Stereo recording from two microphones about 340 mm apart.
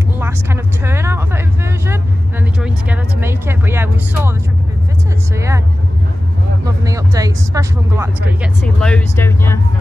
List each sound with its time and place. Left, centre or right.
0.2 s speech: centre
2.6 s speech: centre
6.6 s speech: centre
8.6 s speech: centre